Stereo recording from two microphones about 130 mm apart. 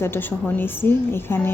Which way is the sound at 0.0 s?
15° left (ahead or behind).